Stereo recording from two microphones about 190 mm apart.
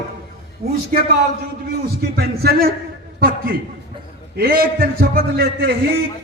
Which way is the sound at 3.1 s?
50° right (ahead or behind).